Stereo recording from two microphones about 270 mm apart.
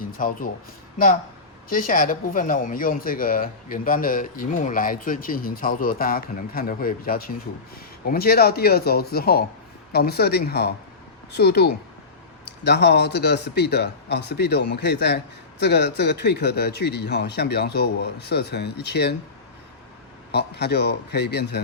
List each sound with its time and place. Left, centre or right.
0.0 s speech: left
1.7 s a man's voice: left
20.3 s a man's voice: left